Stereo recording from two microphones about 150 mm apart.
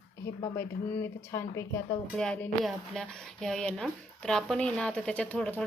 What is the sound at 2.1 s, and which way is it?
A woman's voice, 5° left (ahead or behind).